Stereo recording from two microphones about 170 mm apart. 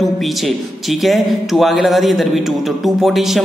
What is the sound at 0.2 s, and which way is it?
A man's voice, centre (ahead or behind).